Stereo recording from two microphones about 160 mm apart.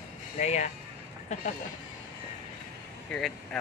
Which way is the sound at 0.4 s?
45° left (ahead or behind).